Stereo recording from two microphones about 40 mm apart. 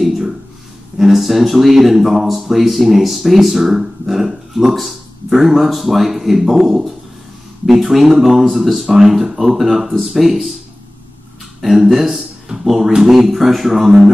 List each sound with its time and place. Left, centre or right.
0.9 s speech: centre
11.6 s speech: centre